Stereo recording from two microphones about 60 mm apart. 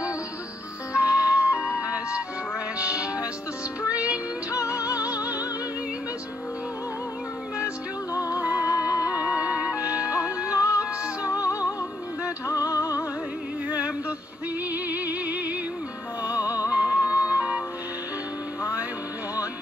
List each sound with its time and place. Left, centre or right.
0.9 s music: right
4.9 s music: left
8.1 s music: left
9.1 s music: right
10.5 s music: left
13.7 s a sound: right
14.7 s music: right
16.6 s music: right